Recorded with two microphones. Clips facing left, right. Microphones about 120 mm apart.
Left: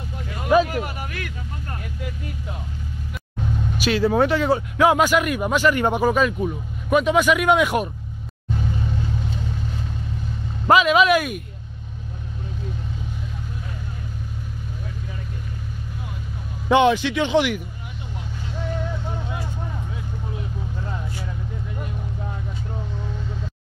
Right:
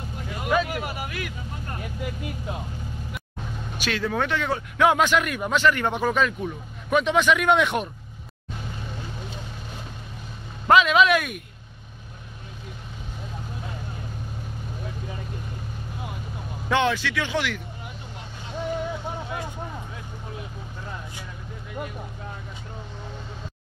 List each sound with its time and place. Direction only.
0.7 s a sound: 10° right (ahead or behind)
4.0 s speech: 30° left (ahead or behind)
4.5 s speech: 5° left (ahead or behind)
10.7 s speech: 5° left (ahead or behind)
16.6 s speech: 15° left (ahead or behind)
18.6 s vehicle: 15° right (ahead or behind)